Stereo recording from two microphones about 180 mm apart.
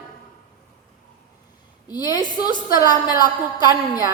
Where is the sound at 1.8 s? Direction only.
20° left (ahead or behind).